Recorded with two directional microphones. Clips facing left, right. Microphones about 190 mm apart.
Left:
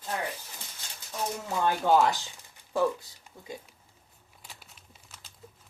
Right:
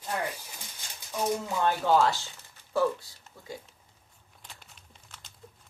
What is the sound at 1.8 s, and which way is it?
Speech, 15° left (ahead or behind).